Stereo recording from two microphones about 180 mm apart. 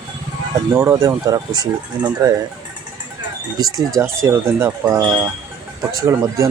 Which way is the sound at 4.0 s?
15° right (ahead or behind).